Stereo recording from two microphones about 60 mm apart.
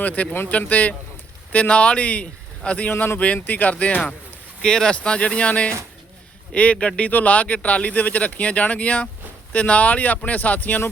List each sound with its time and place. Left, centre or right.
0.0 s speech: left
2.9 s speech: left
3.2 s speech: left
4.6 s speech: centre; by 10.8 s left